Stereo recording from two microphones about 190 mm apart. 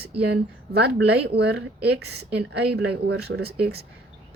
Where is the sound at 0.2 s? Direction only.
60° right (ahead or behind).